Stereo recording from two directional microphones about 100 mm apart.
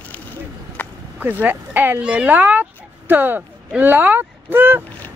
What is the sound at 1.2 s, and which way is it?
Speech, 15° right (ahead or behind).